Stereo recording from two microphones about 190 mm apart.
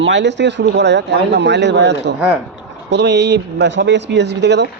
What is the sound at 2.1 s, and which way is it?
Speech, 10° right (ahead or behind).